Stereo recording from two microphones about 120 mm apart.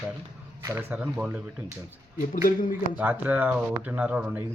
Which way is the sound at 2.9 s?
15° right (ahead or behind).